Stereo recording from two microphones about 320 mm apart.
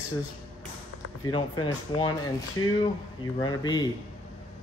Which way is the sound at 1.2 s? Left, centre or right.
Centre.